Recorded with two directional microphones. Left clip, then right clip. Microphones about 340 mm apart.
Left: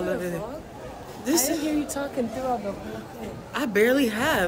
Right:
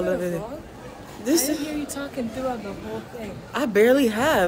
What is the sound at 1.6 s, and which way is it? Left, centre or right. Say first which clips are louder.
Speech: left 3 dB; left.